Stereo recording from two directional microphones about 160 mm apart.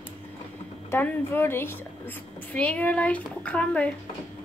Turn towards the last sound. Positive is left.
turn(degrees=5)  # may be behind; listen again after turning